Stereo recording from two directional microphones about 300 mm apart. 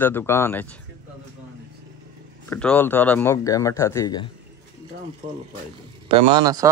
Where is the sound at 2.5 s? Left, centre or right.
Centre.